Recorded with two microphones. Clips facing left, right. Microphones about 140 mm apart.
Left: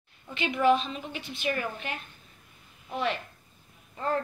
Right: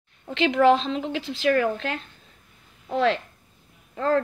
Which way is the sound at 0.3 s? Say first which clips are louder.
Right 6 dB; 90° right.